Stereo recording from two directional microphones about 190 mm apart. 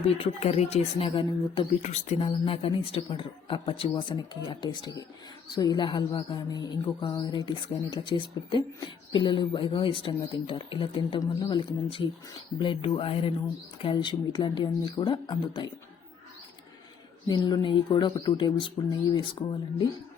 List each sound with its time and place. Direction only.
0.2 s speech: 30° left (ahead or behind)
17.2 s speech: 20° left (ahead or behind)